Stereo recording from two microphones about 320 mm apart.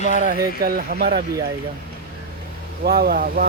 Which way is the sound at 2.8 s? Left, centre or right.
Right.